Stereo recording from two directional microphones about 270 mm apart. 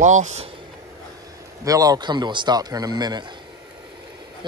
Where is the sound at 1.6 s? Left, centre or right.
Centre.